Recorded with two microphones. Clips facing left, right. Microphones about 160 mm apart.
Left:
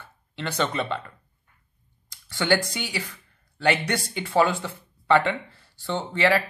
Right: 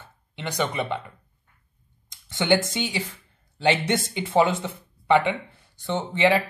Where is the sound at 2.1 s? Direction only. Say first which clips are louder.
Right 2 dB; 20° right (ahead or behind).